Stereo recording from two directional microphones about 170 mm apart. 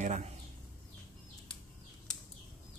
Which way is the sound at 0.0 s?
40° right (ahead or behind).